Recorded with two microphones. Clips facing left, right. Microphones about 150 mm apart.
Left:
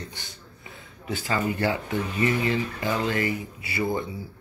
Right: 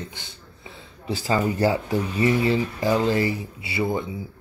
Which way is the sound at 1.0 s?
35° right (ahead or behind).